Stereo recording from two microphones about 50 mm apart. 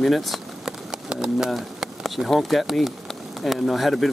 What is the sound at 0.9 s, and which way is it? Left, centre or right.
Clip-clop, centre.